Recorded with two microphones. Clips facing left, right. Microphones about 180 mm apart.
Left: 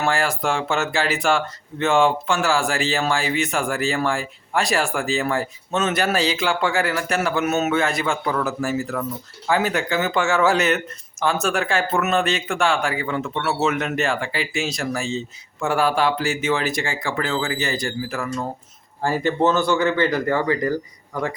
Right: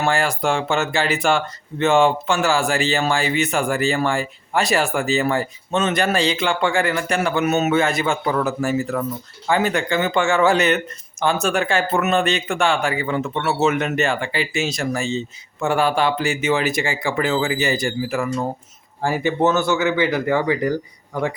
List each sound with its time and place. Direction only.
0.0 s speech: centre (ahead or behind)